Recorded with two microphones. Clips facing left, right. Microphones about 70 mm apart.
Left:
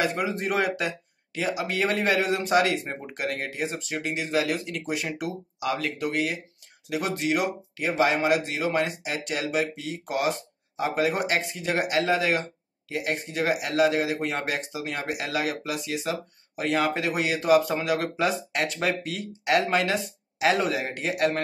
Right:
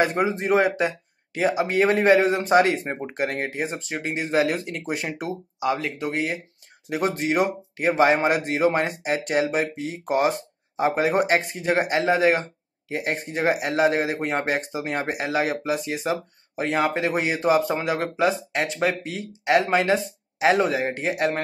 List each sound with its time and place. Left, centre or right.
0.0 s speech: right
0.3 s speech: right